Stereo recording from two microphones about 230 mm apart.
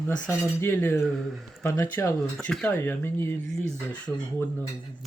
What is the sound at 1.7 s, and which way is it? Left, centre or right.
Speech, centre.